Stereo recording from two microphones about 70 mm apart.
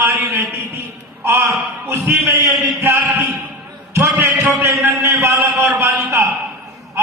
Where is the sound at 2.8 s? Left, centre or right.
Right.